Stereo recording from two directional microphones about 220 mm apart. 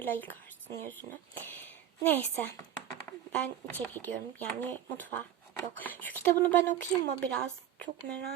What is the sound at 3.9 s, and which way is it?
Speech, 10° left (ahead or behind).